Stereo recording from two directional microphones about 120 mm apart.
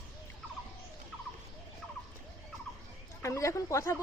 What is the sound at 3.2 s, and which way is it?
Speech, 25° left (ahead or behind).